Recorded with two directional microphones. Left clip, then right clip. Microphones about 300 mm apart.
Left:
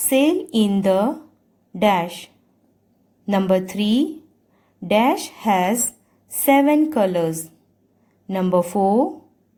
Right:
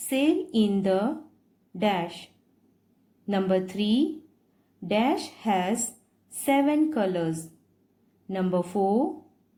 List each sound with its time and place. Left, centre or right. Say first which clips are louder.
0.1 s a woman's voice: left 7 dB; left